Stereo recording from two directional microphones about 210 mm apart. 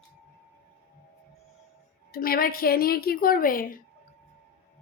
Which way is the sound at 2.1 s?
45° left (ahead or behind).